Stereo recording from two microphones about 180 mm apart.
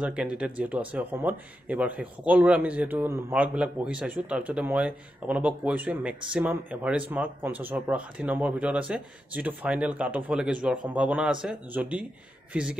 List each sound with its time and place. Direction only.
0.0 s speech: 5° right (ahead or behind)